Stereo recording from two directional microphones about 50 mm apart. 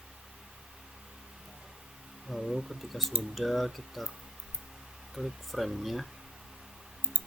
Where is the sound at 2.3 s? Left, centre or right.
Centre.